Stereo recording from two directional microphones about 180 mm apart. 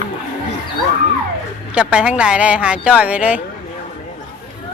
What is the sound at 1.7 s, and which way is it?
Speech, 5° right (ahead or behind).